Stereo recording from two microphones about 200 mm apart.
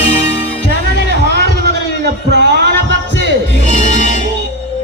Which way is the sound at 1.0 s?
55° right (ahead or behind).